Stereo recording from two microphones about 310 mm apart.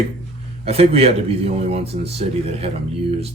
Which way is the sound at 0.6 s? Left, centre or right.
Centre.